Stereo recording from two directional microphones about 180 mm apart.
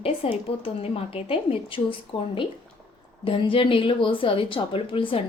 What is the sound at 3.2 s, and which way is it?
A woman's voice, 30° left (ahead or behind).